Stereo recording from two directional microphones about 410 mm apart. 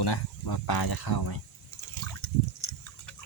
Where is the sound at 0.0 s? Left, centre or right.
Left.